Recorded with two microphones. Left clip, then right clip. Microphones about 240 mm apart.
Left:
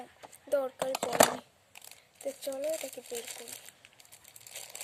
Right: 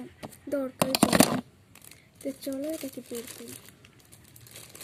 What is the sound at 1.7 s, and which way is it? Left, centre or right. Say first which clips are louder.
Speech: left 1 dB; centre.